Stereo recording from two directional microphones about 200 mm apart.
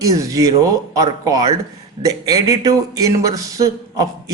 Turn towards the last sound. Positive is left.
turn(degrees=-20)  # may be behind; listen again after turning